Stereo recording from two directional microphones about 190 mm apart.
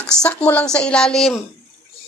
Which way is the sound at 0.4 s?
5° left (ahead or behind).